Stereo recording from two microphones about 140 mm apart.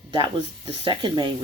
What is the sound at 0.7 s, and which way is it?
Speech, 35° right (ahead or behind).